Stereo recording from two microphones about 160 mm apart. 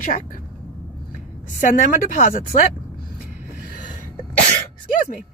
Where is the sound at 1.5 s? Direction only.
55° left (ahead or behind).